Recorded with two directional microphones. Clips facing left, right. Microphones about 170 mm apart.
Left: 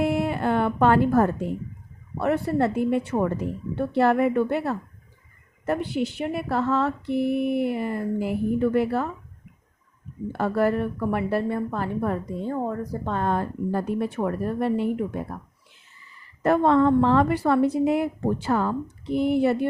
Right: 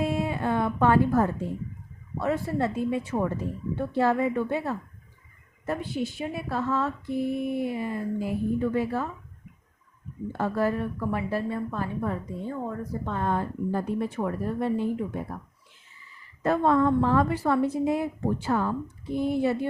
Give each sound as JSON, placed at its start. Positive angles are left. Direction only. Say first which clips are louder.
{"t": 0.0, "sound": "music", "louder": "left 4 dB", "side_deg": 70}
{"t": 2.1, "sound": "speech", "louder": "left 4 dB", "side_deg": 65}
{"t": 10.3, "sound": "a woman's voice", "louder": "left 4 dB", "side_deg": 70}
{"t": 16.4, "sound": "speech", "louder": "left 3 dB", "side_deg": 70}